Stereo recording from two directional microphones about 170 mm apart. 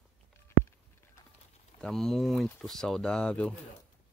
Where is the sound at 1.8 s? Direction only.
Centre (ahead or behind).